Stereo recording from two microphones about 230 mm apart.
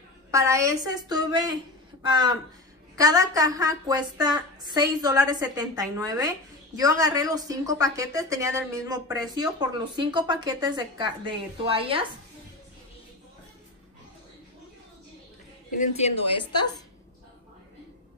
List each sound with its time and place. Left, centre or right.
0.3 s a woman's voice: centre
15.8 s a woman's voice: left